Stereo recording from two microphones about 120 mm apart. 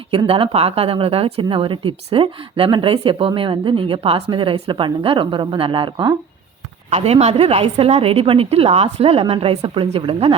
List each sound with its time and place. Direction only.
0.1 s a woman's voice: 50° right (ahead or behind)
6.9 s a woman's voice: 60° right (ahead or behind)